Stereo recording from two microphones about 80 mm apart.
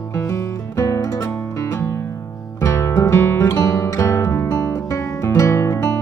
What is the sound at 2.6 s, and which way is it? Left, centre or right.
Music, left.